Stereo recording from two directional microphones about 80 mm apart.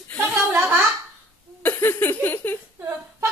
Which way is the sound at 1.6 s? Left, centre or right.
Left.